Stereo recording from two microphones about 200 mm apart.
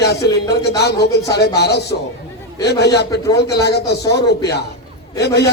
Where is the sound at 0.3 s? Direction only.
55° left (ahead or behind).